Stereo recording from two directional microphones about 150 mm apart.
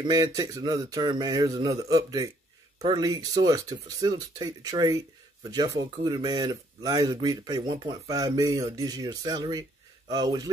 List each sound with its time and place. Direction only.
0.0 s speech: 25° right (ahead or behind)